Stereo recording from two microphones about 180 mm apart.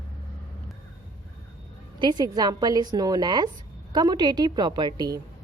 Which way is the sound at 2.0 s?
25° right (ahead or behind).